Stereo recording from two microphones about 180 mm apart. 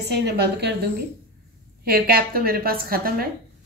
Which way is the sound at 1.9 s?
55° right (ahead or behind).